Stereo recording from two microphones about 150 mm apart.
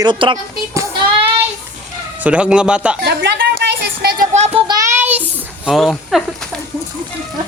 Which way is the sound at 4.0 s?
90° right.